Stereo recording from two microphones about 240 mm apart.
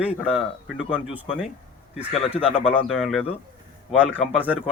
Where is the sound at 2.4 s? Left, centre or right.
Left.